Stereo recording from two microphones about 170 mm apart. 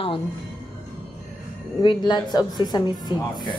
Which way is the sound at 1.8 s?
25° left (ahead or behind).